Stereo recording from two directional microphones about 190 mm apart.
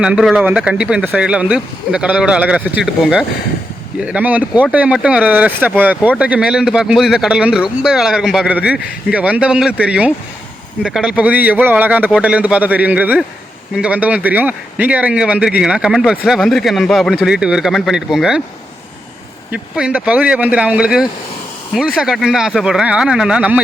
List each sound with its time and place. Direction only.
0.0 s speech: 5° right (ahead or behind)
19.5 s speech: 5° right (ahead or behind)